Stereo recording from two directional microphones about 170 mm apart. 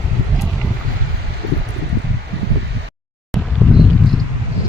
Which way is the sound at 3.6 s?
5° right (ahead or behind).